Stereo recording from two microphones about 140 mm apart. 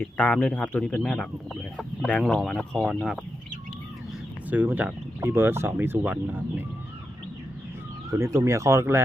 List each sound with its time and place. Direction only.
0.0 s speech: 10° left (ahead or behind)
4.4 s speech: 10° right (ahead or behind)
8.1 s speech: 20° right (ahead or behind)